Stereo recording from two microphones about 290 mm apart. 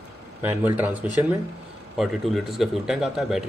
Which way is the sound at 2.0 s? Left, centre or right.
Centre.